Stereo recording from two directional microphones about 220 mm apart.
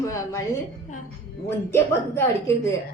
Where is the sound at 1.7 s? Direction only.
10° left (ahead or behind).